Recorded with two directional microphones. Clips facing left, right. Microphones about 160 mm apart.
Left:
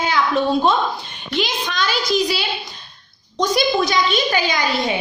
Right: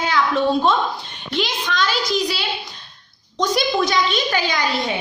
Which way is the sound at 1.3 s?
5° left (ahead or behind).